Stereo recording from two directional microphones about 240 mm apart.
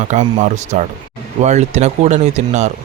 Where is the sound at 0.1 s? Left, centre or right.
Right.